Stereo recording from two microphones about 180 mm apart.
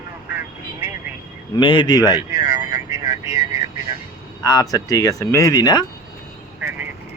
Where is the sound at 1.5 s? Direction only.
30° left (ahead or behind).